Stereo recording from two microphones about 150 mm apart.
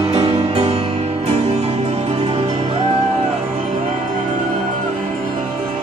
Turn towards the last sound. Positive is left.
turn(degrees=-55)  # may be behind; listen again after turning